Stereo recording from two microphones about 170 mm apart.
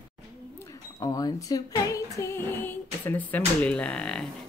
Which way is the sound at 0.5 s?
20° left (ahead or behind).